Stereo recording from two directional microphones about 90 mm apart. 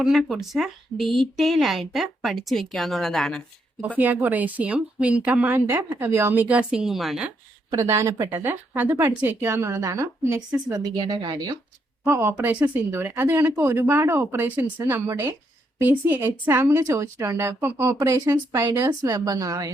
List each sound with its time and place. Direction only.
0.0 s speech: centre (ahead or behind)
3.9 s speech: 20° right (ahead or behind); by 7.3 s 5° right (ahead or behind)
7.7 s a woman's voice: 35° right (ahead or behind); by 11.6 s 55° right (ahead or behind)
12.0 s speech: 30° right (ahead or behind)
12.4 s speech: 15° right (ahead or behind)
12.9 s speech: 25° right (ahead or behind)
15.1 s speech: 40° right (ahead or behind)
15.8 s a woman's voice: 20° right (ahead or behind); by 19.7 s 40° right (ahead or behind)